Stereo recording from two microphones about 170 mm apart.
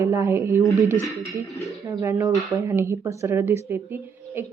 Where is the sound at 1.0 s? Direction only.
Centre (ahead or behind).